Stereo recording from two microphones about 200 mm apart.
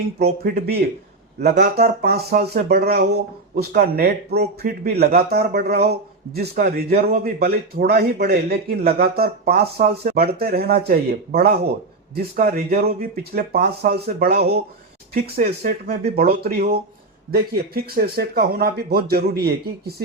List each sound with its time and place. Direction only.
0.2 s a man's voice: 50° right (ahead or behind)
15.1 s a man's voice: 40° right (ahead or behind)